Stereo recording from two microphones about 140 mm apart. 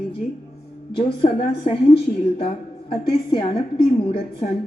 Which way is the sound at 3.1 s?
40° left (ahead or behind).